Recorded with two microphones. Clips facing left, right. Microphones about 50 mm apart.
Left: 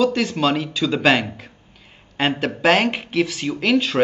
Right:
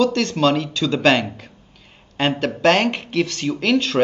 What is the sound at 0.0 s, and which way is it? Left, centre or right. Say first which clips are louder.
Speech: right 1 dB; centre.